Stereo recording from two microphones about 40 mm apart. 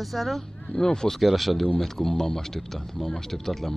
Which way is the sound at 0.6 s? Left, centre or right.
Centre.